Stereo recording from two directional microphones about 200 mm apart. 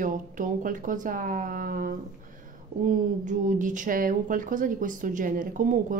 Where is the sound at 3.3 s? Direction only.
40° right (ahead or behind).